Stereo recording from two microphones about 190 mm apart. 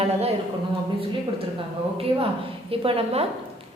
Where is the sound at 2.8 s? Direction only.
30° right (ahead or behind).